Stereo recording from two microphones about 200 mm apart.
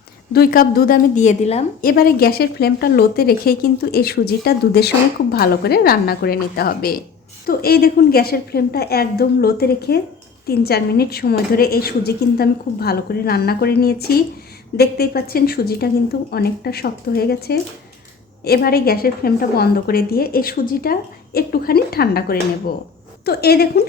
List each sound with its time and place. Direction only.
0.3 s a woman's voice: 45° left (ahead or behind)
1.8 s a woman's voice: 45° left (ahead or behind)